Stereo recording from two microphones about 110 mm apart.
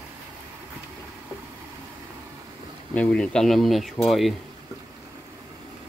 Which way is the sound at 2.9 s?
10° left (ahead or behind).